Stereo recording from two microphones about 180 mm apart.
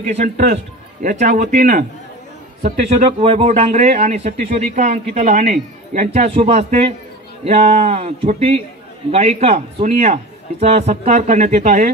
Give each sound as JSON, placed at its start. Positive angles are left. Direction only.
{"t": 0.0, "sound": "speech", "side_deg": -45}
{"t": 3.2, "sound": "a man's voice", "side_deg": -30}